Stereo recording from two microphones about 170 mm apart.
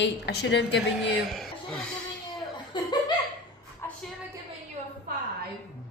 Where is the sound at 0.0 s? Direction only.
90° left.